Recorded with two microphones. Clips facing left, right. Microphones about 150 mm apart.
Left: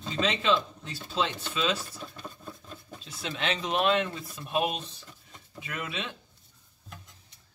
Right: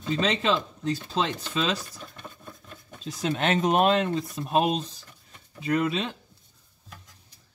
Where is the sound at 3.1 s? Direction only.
40° right (ahead or behind).